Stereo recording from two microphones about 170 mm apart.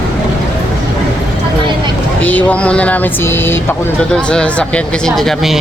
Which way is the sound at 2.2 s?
10° left (ahead or behind).